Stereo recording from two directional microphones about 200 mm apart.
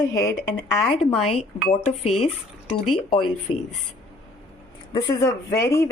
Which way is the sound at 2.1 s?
35° left (ahead or behind).